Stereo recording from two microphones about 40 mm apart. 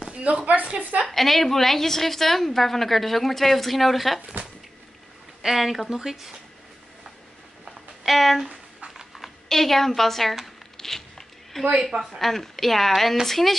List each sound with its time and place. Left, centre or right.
0.1 s speech: right
1.0 s a woman's voice: centre
5.4 s a woman's voice: centre
7.6 s a sound: centre
8.5 s a sound: right
9.2 s a woman's voice: centre
10.8 s zipper: centre
11.7 s a woman's voice: centre
12.2 s a woman's voice: centre